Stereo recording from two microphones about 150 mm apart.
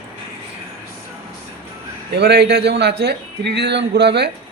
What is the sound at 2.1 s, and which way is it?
A man's voice, 90° right.